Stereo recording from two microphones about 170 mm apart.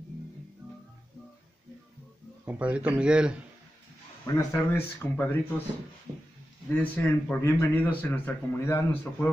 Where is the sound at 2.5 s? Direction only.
10° right (ahead or behind).